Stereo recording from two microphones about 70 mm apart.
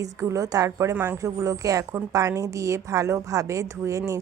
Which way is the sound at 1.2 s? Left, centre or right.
Right.